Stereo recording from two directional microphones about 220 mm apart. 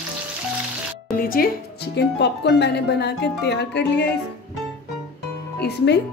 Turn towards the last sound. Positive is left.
turn(degrees=50)  # may be behind; listen again after turning